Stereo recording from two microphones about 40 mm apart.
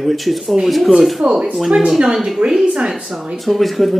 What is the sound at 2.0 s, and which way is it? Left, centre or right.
Speech, right.